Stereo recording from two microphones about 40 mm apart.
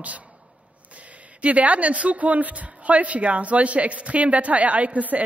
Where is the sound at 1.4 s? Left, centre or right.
Right.